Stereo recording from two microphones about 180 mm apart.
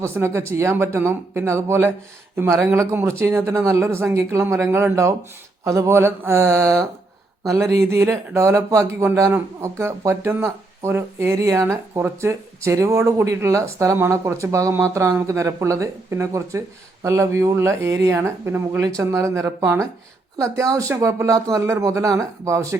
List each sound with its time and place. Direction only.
0.2 s speech: 15° right (ahead or behind)